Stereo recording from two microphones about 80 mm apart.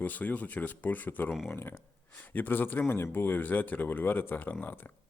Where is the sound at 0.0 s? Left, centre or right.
Left.